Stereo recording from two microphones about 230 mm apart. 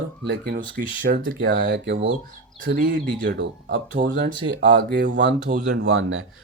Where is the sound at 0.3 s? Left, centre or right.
Right.